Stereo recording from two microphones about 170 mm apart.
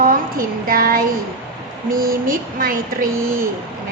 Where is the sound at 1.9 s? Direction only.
55° right (ahead or behind).